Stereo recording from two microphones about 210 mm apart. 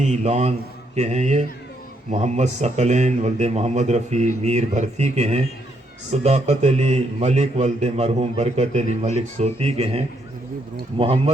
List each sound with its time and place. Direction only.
0.0 s a man's voice: 30° right (ahead or behind)